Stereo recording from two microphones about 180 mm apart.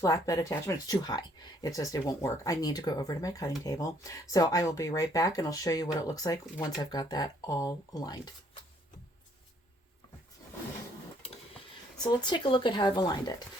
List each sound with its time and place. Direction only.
0.0 s speech: 20° left (ahead or behind)
12.0 s speech: 25° left (ahead or behind)